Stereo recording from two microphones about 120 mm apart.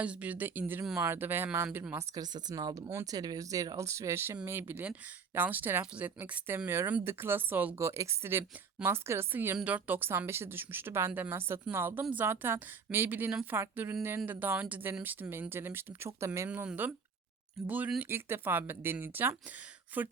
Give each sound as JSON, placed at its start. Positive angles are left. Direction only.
{"t": 0.0, "sound": "a woman's voice", "side_deg": -10}
{"t": 2.1, "sound": "a woman's voice", "side_deg": -35}
{"t": 16.5, "sound": "a woman's voice", "side_deg": -15}